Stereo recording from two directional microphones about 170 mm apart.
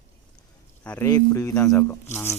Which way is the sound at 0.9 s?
15° left (ahead or behind).